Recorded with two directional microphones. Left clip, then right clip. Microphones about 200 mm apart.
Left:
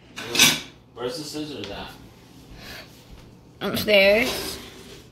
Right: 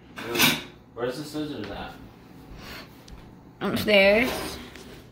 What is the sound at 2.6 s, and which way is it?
Gasp, 5° right (ahead or behind).